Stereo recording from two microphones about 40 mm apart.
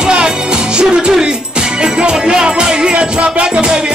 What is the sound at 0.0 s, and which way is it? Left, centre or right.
Music, right.